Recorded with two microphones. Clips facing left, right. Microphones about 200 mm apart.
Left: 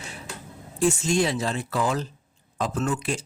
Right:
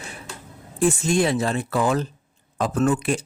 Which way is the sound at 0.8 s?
55° right (ahead or behind).